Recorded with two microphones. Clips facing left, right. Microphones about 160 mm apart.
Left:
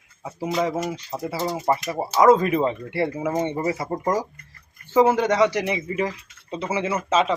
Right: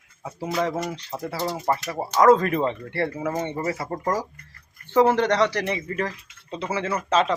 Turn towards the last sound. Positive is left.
turn(degrees=5)  # may be behind; listen again after turning